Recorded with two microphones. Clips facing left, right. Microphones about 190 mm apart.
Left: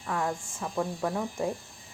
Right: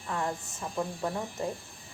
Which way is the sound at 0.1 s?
10° left (ahead or behind).